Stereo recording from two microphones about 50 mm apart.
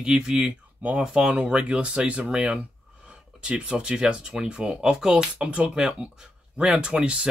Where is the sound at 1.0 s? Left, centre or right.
Centre.